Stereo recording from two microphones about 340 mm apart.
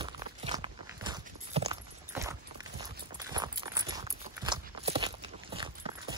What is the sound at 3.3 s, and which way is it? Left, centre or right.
Clip-clop, centre.